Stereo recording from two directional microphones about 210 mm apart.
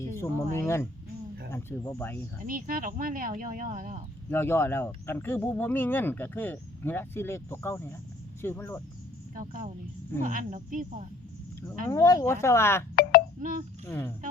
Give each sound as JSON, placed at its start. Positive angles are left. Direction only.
{"t": 0.2, "sound": "speech", "side_deg": 10}
{"t": 2.4, "sound": "speech", "side_deg": -40}
{"t": 4.3, "sound": "speech", "side_deg": 10}
{"t": 9.3, "sound": "speech", "side_deg": -40}
{"t": 11.9, "sound": "speech", "side_deg": 15}
{"t": 13.0, "sound": "a sound", "side_deg": 45}
{"t": 13.4, "sound": "speech", "side_deg": -40}
{"t": 13.8, "sound": "speech", "side_deg": 10}